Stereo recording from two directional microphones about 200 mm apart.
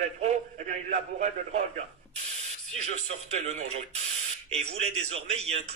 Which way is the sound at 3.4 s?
35° right (ahead or behind).